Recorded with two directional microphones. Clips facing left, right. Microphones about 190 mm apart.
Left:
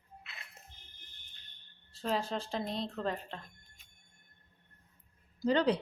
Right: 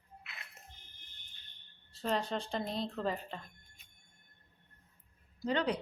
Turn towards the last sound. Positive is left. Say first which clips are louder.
# left 4 dB
turn(degrees=35)  # may be behind; listen again after turning